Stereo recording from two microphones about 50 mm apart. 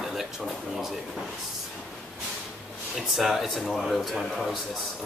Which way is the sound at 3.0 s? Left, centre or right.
Centre.